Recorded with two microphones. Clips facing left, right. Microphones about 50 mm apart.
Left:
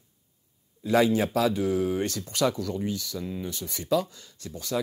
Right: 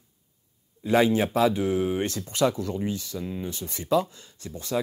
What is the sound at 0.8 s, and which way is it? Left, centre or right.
Speech, right.